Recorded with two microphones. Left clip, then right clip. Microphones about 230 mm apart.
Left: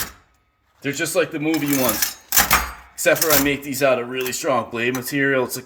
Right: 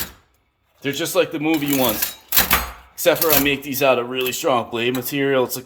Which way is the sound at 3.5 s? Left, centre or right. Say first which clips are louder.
Right 2 dB; left.